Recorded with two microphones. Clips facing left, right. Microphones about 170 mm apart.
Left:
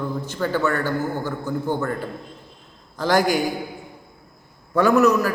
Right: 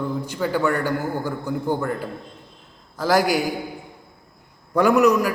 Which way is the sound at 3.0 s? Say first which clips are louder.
Even; 5° right (ahead or behind).